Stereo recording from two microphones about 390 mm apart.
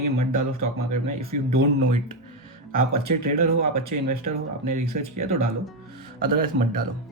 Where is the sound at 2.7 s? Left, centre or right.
Right.